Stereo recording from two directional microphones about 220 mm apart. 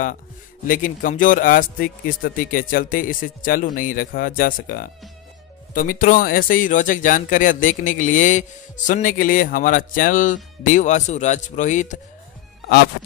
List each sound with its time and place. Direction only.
0.7 s speech: 35° left (ahead or behind)